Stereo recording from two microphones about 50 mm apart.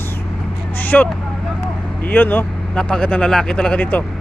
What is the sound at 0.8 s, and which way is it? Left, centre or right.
Vehicle, left.